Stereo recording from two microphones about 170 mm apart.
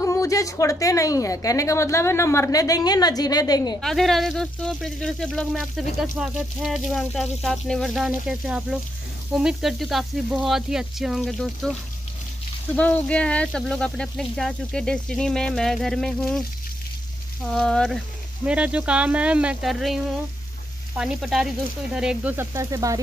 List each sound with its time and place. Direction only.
0.0 s a woman's voice: 20° left (ahead or behind)
3.8 s speech: centre (ahead or behind)
12.7 s speech: 10° left (ahead or behind)
17.5 s speech: 5° left (ahead or behind); by 22.9 s 20° right (ahead or behind)